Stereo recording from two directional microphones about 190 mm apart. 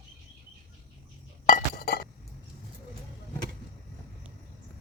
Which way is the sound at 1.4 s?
50° left (ahead or behind).